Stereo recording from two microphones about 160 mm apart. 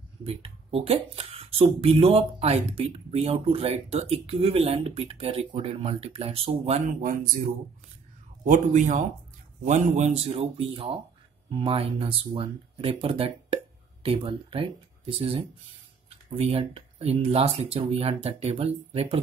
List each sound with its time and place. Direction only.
0.2 s speech: 35° right (ahead or behind); by 7.2 s 55° right (ahead or behind)
8.5 s speech: 50° right (ahead or behind)